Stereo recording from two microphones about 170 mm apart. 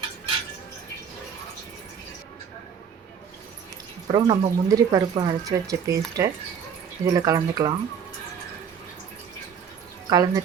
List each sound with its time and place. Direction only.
4.1 s speech: 25° right (ahead or behind)
10.1 s speech: 20° right (ahead or behind)